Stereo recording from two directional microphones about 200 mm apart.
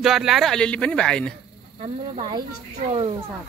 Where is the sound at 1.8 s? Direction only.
25° right (ahead or behind).